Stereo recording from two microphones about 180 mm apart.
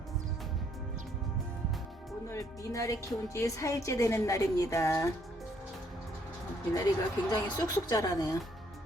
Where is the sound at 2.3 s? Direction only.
15° left (ahead or behind).